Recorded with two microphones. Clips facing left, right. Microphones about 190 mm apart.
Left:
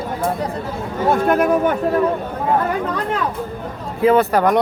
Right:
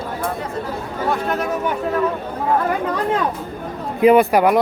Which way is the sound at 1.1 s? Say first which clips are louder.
Left 6 dB; 50° left (ahead or behind).